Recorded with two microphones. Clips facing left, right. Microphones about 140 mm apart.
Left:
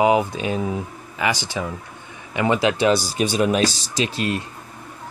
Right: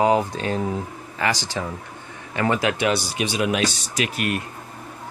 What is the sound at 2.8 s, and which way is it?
Speech, 40° left (ahead or behind).